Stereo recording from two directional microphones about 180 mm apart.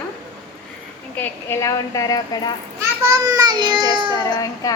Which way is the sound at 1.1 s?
10° left (ahead or behind).